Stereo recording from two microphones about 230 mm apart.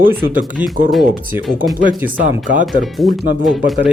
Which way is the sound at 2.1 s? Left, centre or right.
Right.